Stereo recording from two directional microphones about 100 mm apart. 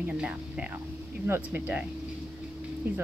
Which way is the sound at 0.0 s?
10° right (ahead or behind).